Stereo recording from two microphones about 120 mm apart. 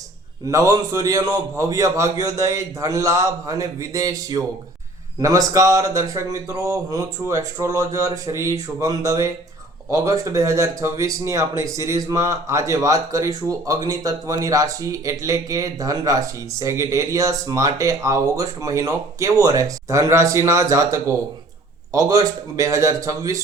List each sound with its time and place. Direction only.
0.4 s speech: 30° right (ahead or behind)